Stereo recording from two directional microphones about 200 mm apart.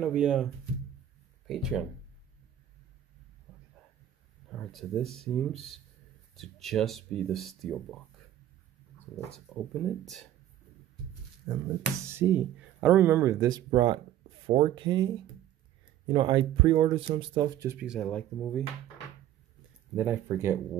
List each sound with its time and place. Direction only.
0.0 s speech: 5° right (ahead or behind)
1.5 s speech: centre (ahead or behind)
4.5 s speech: 5° left (ahead or behind)
9.6 s speech: centre (ahead or behind)
11.4 s speech: 5° right (ahead or behind); by 15.0 s 25° right (ahead or behind)
16.1 s speech: 25° right (ahead or behind)
17.8 s speech: centre (ahead or behind)
20.0 s speech: 10° right (ahead or behind)